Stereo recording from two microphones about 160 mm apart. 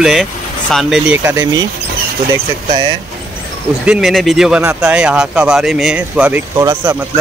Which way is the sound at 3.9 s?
Centre (ahead or behind).